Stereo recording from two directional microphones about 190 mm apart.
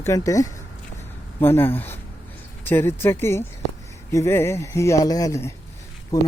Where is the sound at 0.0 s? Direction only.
15° left (ahead or behind).